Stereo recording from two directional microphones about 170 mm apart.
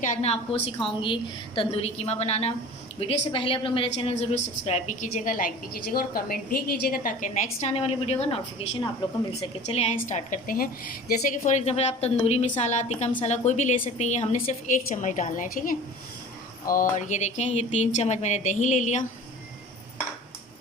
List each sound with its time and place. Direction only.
0.0 s a woman's voice: 45° left (ahead or behind)
11.4 s a woman's voice: 40° left (ahead or behind)